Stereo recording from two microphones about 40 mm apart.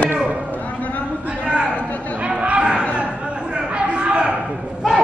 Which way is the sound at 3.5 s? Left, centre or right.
Right.